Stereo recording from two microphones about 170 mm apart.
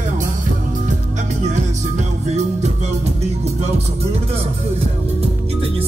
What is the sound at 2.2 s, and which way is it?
Music, 40° right (ahead or behind).